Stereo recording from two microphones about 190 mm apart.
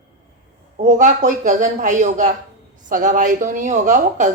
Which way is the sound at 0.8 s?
40° right (ahead or behind).